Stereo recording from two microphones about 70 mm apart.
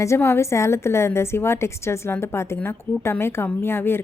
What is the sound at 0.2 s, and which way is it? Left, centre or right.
A woman's voice, left.